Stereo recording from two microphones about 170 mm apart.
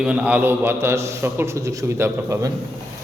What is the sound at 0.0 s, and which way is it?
A man's voice, 5° right (ahead or behind).